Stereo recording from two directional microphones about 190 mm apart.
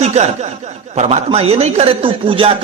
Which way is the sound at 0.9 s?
35° right (ahead or behind).